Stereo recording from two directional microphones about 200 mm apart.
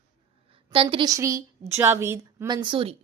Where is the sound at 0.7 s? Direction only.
25° right (ahead or behind).